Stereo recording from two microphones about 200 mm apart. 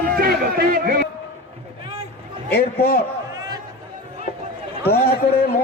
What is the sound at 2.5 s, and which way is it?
Speech, 50° left (ahead or behind).